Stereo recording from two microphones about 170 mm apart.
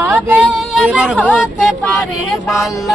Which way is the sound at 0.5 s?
5° right (ahead or behind).